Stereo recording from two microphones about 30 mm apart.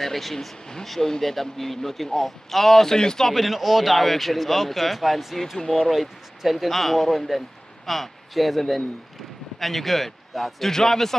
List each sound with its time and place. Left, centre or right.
0.0 s speech: centre
3.3 s speech: centre
10.7 s speech: centre